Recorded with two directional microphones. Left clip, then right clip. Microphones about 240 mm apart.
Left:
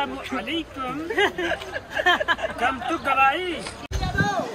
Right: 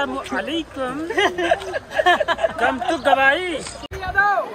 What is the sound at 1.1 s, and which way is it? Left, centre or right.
Speech, right.